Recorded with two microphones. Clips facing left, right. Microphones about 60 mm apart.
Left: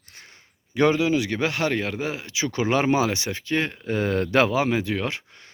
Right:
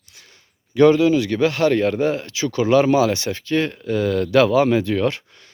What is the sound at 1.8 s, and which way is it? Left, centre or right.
Speech, centre.